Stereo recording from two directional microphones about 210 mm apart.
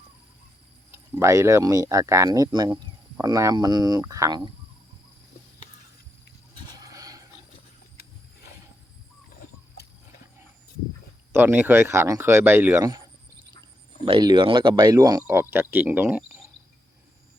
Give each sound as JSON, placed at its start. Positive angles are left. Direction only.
{"t": 0.9, "sound": "speech", "side_deg": -10}
{"t": 6.7, "sound": "a sound", "side_deg": -15}
{"t": 9.8, "sound": "wild animals", "side_deg": 50}
{"t": 11.3, "sound": "speech", "side_deg": -10}
{"t": 14.0, "sound": "speech", "side_deg": -25}